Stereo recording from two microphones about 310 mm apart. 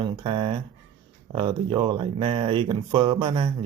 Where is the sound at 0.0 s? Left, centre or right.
Centre.